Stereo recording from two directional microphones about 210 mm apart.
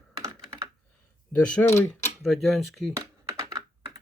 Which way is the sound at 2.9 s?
15° right (ahead or behind).